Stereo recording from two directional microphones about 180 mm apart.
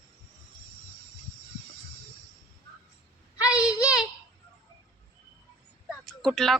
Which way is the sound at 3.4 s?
5° right (ahead or behind).